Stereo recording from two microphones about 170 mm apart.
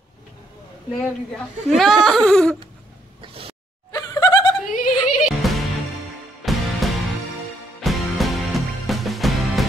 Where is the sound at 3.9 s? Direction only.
20° left (ahead or behind).